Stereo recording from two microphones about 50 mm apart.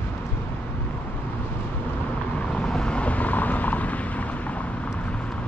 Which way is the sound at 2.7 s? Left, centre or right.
Centre.